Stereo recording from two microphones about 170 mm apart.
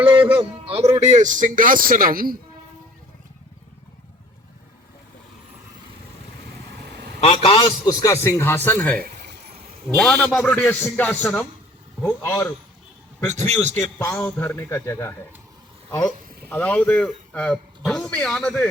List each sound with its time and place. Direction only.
0.2 s a man's voice: 10° right (ahead or behind)
0.9 s a man's voice: 45° right (ahead or behind)
7.2 s a man's voice: 35° left (ahead or behind)
7.9 s speech: 20° left (ahead or behind)
9.0 s a sound: 65° right (ahead or behind)
10.0 s speech: 5° left (ahead or behind)
13.5 s a man's voice: 40° right (ahead or behind)
14.0 s speech: 10° left (ahead or behind)